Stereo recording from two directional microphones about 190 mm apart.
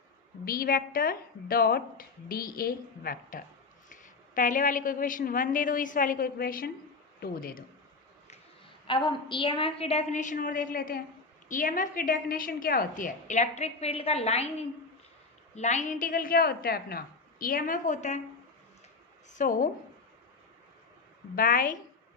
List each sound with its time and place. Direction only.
0.4 s a woman's voice: 50° left (ahead or behind)
8.9 s a woman's voice: 25° left (ahead or behind)
15.5 s a woman's voice: 40° left (ahead or behind)
19.4 s a woman's voice: 45° left (ahead or behind)
21.3 s a woman's voice: 45° left (ahead or behind)